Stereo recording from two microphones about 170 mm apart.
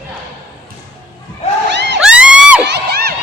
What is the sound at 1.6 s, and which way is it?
Crowd, 90° right.